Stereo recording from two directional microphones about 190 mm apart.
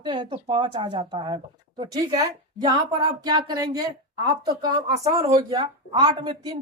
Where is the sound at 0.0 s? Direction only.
25° right (ahead or behind).